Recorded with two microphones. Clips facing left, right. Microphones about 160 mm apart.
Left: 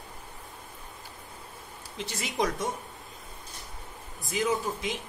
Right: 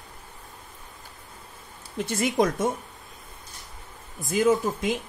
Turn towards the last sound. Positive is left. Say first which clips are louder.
# right 7 dB
turn(degrees=-50)  # may be behind; listen again after turning